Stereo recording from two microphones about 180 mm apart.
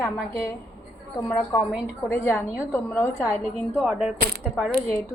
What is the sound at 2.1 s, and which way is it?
A woman's voice, 10° left (ahead or behind).